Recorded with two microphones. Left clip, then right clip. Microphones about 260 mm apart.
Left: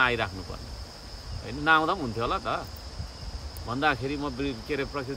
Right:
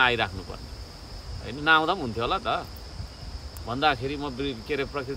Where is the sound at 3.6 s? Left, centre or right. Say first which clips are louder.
Right 2 dB; centre.